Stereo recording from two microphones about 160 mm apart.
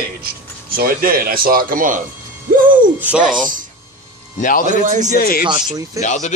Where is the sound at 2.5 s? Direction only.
55° right (ahead or behind).